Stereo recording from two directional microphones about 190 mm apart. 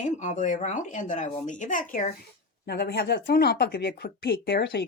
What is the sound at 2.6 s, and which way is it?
Speech, 60° left (ahead or behind).